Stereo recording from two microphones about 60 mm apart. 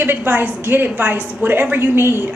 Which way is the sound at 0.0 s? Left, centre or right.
Right.